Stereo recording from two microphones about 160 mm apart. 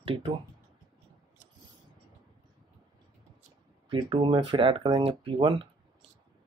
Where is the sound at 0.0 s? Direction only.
35° right (ahead or behind).